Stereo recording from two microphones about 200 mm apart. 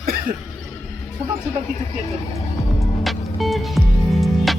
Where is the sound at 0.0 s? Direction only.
50° right (ahead or behind).